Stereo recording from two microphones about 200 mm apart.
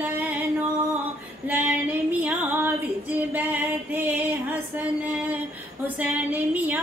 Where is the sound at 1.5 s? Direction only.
10° right (ahead or behind).